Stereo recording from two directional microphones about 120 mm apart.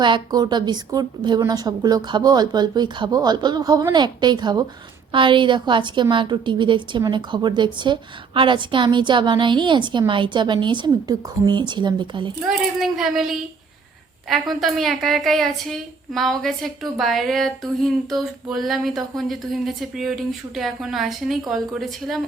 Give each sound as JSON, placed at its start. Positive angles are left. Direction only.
{"t": 0.0, "sound": "a woman's voice", "side_deg": -35}
{"t": 12.5, "sound": "a woman's voice", "side_deg": -5}